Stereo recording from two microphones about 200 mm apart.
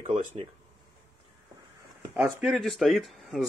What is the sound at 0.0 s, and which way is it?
Speech, 30° right (ahead or behind).